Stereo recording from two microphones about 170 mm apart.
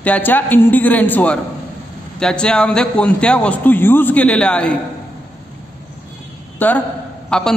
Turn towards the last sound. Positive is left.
turn(degrees=5)  # may be behind; listen again after turning